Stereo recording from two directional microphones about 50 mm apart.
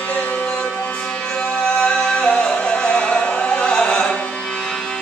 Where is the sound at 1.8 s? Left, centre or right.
Centre.